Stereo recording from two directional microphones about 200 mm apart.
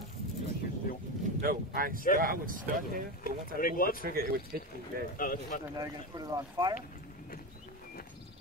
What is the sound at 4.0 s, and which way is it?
Speech, 45° right (ahead or behind).